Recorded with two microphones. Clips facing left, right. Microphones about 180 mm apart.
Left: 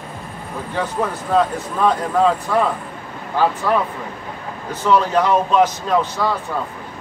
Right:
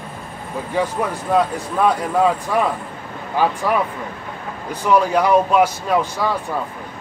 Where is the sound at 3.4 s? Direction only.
15° right (ahead or behind).